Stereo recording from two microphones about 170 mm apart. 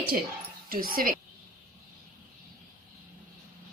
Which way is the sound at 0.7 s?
60° right (ahead or behind).